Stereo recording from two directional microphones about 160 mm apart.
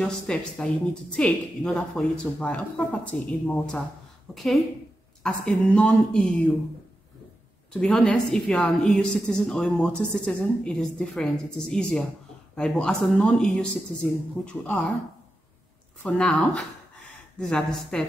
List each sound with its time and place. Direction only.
0.0 s a woman's voice: 5° left (ahead or behind)
7.7 s a woman's voice: 5° left (ahead or behind)
16.0 s a woman's voice: 5° left (ahead or behind)